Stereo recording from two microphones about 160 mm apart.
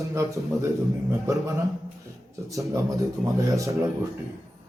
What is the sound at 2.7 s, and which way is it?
A man's voice, 20° right (ahead or behind).